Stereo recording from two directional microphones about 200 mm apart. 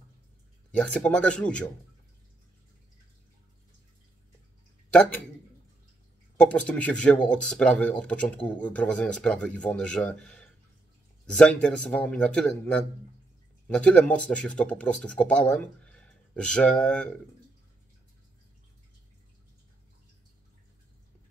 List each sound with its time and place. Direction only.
0.7 s speech: 5° left (ahead or behind)
6.3 s speech: 5° left (ahead or behind)